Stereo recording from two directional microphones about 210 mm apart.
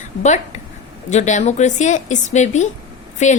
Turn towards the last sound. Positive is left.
turn(degrees=35)  # may be behind; listen again after turning